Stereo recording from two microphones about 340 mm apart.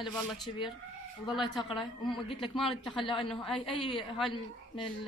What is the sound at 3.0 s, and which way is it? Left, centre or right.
Speech, centre.